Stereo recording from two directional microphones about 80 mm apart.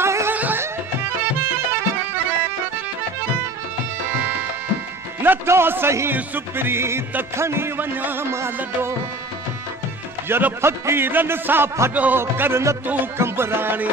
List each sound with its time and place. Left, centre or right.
0.0 s music: right
0.3 s music: right
5.2 s music: right
10.2 s music: right
11.9 s music: centre
12.2 s music: right